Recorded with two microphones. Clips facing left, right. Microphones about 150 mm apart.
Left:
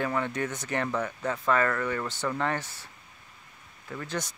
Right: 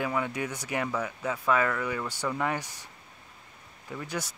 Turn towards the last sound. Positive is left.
turn(degrees=-10)  # may be behind; listen again after turning